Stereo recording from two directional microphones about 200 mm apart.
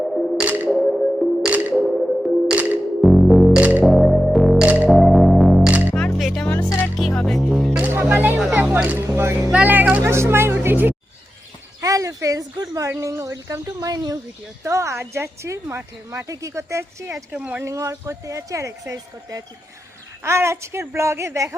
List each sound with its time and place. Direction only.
0.0 s music: centre (ahead or behind)
5.9 s music: 10° left (ahead or behind); by 10.9 s 10° right (ahead or behind)
11.8 s speech: 15° right (ahead or behind)